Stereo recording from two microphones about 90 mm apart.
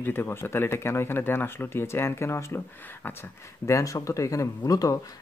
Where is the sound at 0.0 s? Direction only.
25° left (ahead or behind).